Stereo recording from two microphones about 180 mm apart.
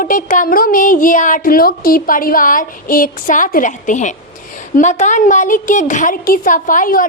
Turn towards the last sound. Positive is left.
turn(degrees=50)  # may be behind; listen again after turning